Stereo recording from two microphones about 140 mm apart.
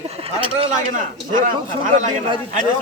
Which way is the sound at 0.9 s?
70° right (ahead or behind).